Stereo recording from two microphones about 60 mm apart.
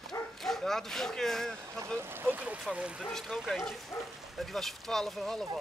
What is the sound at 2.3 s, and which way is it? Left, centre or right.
Speech, right.